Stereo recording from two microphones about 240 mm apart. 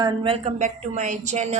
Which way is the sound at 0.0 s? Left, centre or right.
Right.